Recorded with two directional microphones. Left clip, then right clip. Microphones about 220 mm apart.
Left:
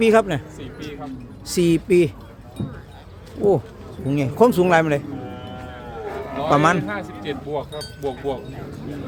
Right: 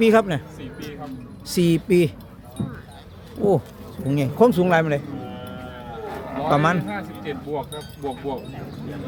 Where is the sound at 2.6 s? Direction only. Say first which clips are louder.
Even; 45° right (ahead or behind).